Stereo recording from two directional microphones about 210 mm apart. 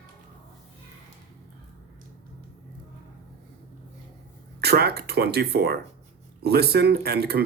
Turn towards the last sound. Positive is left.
turn(degrees=-50)  # may be behind; listen again after turning